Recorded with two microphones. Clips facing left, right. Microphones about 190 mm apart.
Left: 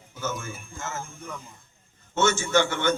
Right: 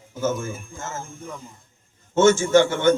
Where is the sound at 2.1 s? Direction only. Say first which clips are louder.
Right 7 dB; 50° right (ahead or behind).